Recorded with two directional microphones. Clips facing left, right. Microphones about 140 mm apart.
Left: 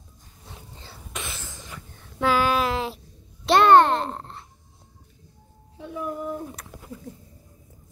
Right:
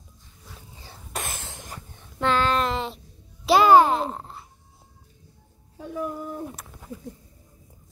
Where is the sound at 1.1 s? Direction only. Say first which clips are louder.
Right 3 dB; 45° right (ahead or behind).